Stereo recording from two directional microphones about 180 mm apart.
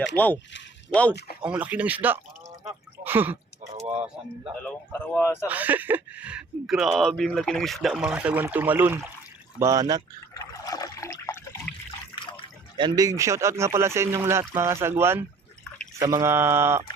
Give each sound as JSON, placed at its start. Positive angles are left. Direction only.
{"t": 0.2, "sound": "speech", "side_deg": 10}
{"t": 1.4, "sound": "speech", "side_deg": -5}
{"t": 4.6, "sound": "speech", "side_deg": 10}
{"t": 5.5, "sound": "speech", "side_deg": -10}
{"t": 10.3, "sound": "liquid", "side_deg": 20}
{"t": 12.7, "sound": "speech", "side_deg": -20}